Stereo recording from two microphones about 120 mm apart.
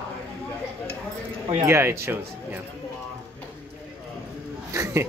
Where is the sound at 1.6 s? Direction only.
20° right (ahead or behind).